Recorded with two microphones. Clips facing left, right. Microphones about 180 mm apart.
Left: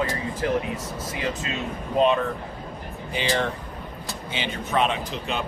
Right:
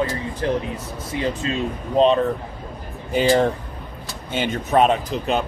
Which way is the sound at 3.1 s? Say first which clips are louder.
Right 8 dB; 45° right (ahead or behind).